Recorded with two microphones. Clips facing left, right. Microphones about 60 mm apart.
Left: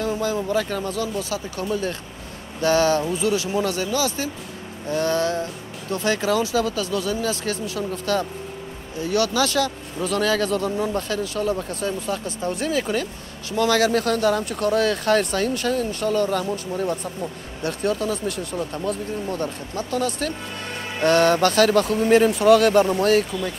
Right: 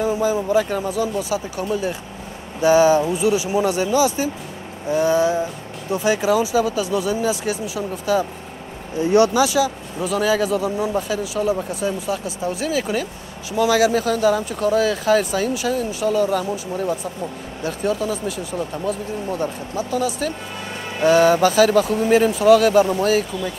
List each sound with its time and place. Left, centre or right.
0.0 s speech: centre
9.0 s speech: right
9.4 s speech: centre